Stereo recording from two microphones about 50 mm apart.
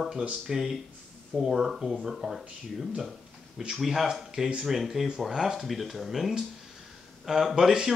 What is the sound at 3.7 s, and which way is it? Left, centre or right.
Speech, centre.